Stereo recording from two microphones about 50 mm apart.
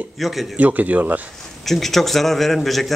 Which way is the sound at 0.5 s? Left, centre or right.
Right.